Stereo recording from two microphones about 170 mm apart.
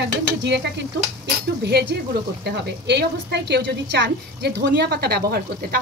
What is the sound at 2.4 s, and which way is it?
A woman's voice, 80° right.